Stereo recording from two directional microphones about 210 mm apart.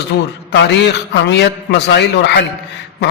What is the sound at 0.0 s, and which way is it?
A man's voice, 55° left (ahead or behind).